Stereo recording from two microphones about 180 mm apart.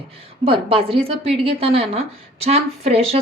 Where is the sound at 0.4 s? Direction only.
30° right (ahead or behind).